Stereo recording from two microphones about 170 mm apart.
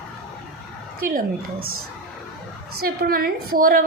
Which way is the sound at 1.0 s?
55° right (ahead or behind).